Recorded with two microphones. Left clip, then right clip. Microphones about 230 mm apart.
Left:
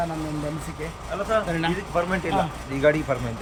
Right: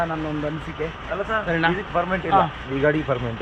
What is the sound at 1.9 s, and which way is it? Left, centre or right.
Speech, right.